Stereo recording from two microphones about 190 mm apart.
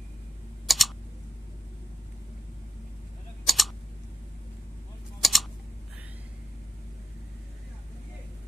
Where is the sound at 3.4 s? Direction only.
Centre (ahead or behind).